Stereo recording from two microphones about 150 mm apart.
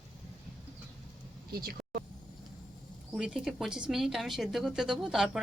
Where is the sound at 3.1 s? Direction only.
Centre (ahead or behind).